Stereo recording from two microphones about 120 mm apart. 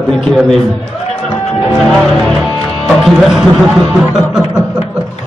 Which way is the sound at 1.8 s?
Centre (ahead or behind).